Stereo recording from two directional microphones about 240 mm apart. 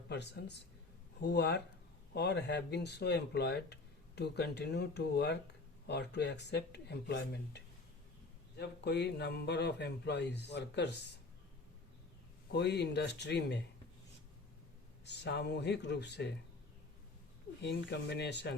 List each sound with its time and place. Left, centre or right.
0.1 s speech: left
12.5 s speech: left
15.0 s speech: left
17.6 s speech: left